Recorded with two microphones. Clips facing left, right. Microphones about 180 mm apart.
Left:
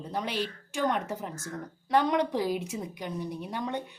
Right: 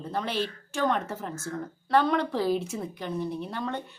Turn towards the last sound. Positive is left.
turn(degrees=15)  # may be behind; listen again after turning